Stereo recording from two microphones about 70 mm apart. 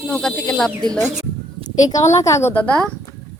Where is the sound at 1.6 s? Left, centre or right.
Left.